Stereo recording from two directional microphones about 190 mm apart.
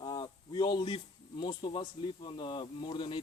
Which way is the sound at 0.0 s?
20° left (ahead or behind).